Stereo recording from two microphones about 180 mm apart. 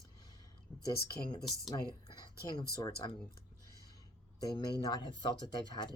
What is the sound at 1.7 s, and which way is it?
Speech, 25° left (ahead or behind).